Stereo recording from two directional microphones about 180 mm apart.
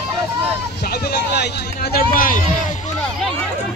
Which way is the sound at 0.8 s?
60° left (ahead or behind).